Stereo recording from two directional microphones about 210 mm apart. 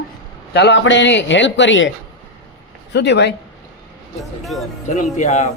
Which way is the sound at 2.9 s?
55° left (ahead or behind).